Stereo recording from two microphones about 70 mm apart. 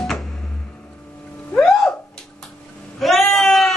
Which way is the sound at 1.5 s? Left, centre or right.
Centre.